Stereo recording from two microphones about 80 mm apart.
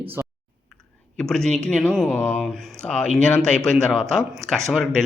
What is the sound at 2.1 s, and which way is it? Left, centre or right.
A man's voice, left.